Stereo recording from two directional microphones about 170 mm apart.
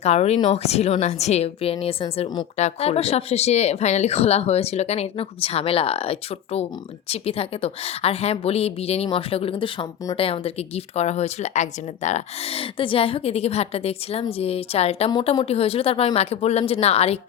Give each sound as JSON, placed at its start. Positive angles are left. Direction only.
{"t": 0.0, "sound": "speech", "side_deg": 40}